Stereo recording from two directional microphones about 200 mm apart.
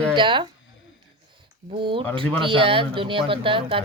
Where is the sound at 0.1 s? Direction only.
25° right (ahead or behind).